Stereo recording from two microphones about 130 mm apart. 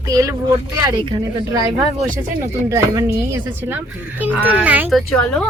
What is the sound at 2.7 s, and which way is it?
Speech, 25° right (ahead or behind).